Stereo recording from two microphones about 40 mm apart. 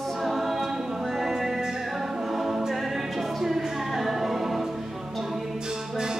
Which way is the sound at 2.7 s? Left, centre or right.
Centre.